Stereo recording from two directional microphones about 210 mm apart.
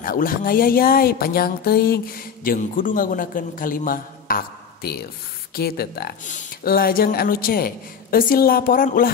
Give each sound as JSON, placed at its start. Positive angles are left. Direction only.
{"t": 0.0, "sound": "speech", "side_deg": 45}